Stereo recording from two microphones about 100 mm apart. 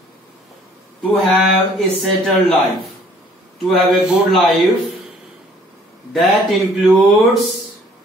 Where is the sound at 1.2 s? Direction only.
Centre (ahead or behind).